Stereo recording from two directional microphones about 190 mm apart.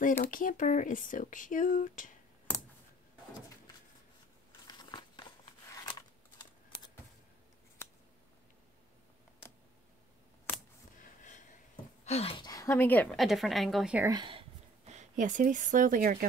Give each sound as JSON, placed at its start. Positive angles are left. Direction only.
{"t": 0.2, "sound": "speech", "side_deg": 45}
{"t": 4.6, "sound": "scissors", "side_deg": 25}
{"t": 10.5, "sound": "a sound", "side_deg": 10}
{"t": 11.0, "sound": "a sound", "side_deg": 40}
{"t": 12.0, "sound": "a woman's voice", "side_deg": 35}
{"t": 14.0, "sound": "speech", "side_deg": -25}
{"t": 14.9, "sound": "speech", "side_deg": -40}